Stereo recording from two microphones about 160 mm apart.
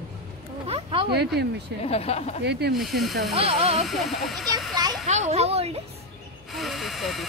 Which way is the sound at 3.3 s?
40° right (ahead or behind).